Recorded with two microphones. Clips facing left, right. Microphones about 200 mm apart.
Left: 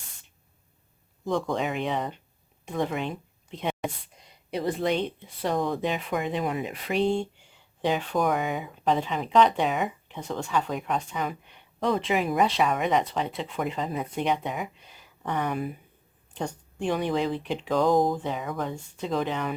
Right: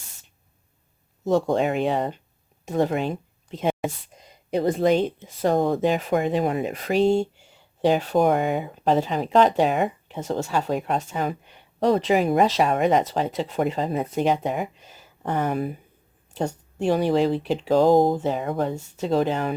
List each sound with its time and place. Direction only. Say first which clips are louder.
1.5 s speech: right 6 dB; 40° right (ahead or behind)
8.4 s speech: right 6 dB; 55° right (ahead or behind)
8.8 s speech: right 4 dB; 40° right (ahead or behind)
16.7 s speech: right 6 dB; 40° right (ahead or behind)